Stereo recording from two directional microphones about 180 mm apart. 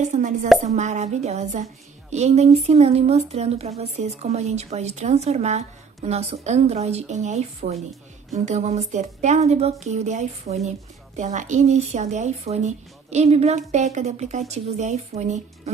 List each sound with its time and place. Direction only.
0.0 s a woman's voice: 45° right (ahead or behind)